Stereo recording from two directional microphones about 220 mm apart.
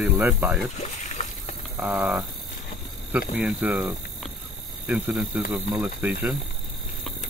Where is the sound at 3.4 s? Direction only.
5° right (ahead or behind).